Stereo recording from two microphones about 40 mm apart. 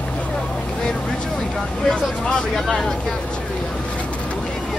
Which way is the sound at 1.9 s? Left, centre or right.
Left.